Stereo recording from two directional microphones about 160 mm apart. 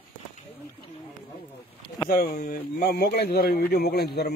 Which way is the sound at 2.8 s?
75° left (ahead or behind).